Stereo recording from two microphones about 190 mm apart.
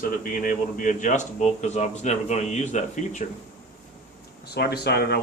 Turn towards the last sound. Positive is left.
turn(degrees=60)  # may be behind; listen again after turning